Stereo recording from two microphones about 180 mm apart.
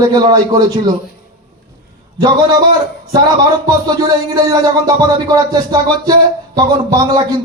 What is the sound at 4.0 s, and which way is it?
A man's voice, 20° right (ahead or behind).